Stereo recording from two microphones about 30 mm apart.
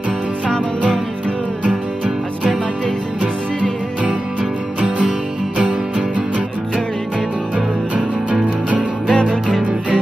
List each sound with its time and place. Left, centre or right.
1.6 s music: right
5.6 s music: right
9.1 s music: left